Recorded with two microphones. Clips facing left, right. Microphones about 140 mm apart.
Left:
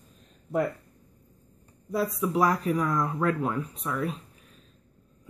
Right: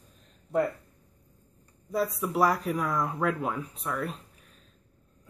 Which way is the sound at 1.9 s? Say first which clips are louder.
Left 1 dB; centre (ahead or behind).